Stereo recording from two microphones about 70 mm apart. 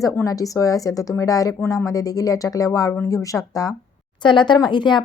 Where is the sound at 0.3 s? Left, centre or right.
Left.